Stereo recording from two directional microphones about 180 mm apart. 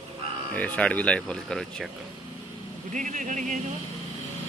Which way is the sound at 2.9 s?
45° right (ahead or behind).